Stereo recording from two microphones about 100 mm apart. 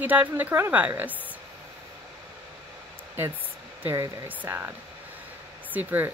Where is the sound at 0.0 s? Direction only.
15° right (ahead or behind).